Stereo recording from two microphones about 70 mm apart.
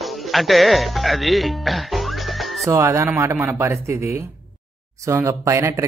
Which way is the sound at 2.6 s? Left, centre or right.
Right.